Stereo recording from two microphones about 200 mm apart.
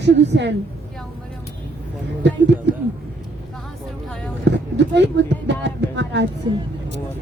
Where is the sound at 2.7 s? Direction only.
60° right (ahead or behind).